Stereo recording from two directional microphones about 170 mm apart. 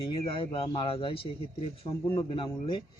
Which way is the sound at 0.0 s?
30° left (ahead or behind).